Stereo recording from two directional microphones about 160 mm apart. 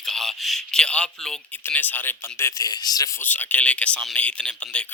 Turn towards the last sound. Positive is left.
turn(degrees=10)  # may be behind; listen again after turning